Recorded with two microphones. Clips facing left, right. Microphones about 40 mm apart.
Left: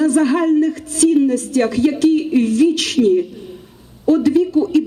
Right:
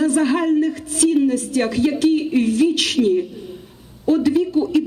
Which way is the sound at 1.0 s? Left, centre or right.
Right.